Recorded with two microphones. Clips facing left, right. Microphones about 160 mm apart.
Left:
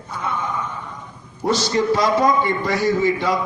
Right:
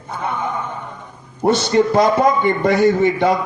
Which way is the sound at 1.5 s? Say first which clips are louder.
Right 4 dB; 55° right (ahead or behind).